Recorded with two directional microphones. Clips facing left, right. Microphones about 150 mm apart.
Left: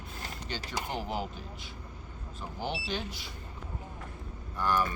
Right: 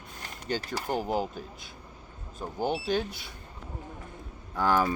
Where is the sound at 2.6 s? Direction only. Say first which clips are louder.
Right 7 dB; 50° right (ahead or behind).